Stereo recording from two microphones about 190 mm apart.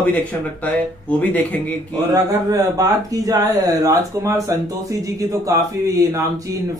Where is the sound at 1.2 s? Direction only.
10° left (ahead or behind).